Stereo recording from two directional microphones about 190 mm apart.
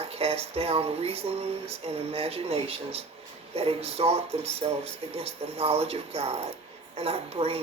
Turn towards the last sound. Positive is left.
turn(degrees=-30)  # may be behind; listen again after turning